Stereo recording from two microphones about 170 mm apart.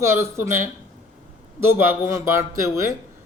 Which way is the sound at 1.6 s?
15° right (ahead or behind).